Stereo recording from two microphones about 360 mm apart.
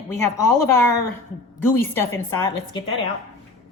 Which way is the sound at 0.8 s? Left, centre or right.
Left.